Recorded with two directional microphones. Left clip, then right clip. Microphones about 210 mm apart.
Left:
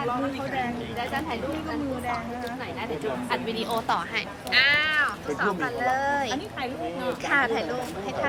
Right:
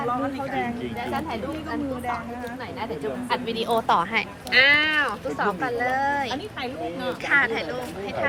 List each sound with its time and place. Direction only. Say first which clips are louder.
3.2 s a woman's voice: right 6 dB; 30° right (ahead or behind)
4.5 s speech: right 3 dB; 15° right (ahead or behind)
5.5 s speech: right 1 dB; 5° left (ahead or behind)
7.3 s speech: right 3 dB; 15° left (ahead or behind)